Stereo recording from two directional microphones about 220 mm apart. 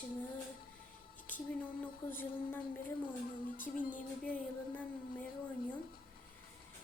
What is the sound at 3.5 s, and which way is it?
Music, 40° left (ahead or behind).